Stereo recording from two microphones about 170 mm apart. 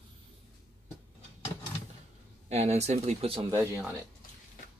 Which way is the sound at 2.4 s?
40° right (ahead or behind).